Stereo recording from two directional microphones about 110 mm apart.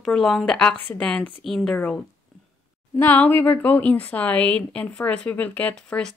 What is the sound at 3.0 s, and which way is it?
A woman's voice, 20° left (ahead or behind).